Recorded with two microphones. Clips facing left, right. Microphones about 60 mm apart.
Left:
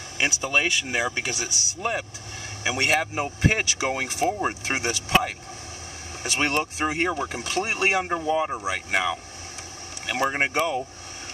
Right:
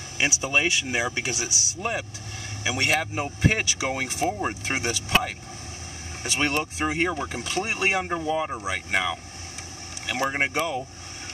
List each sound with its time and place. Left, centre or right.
0.2 s speech: centre
2.6 s speech: centre
6.4 s speech: centre